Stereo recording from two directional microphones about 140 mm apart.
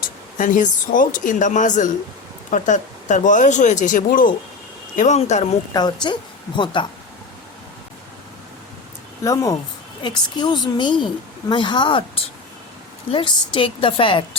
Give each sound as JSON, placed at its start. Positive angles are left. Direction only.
{"t": 0.3, "sound": "speech", "side_deg": 65}
{"t": 4.9, "sound": "speech", "side_deg": 55}
{"t": 5.7, "sound": "a woman's voice", "side_deg": 30}
{"t": 9.2, "sound": "a woman's voice", "side_deg": 25}